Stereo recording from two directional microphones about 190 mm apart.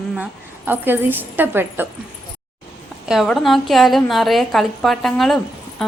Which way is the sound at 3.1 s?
Centre (ahead or behind).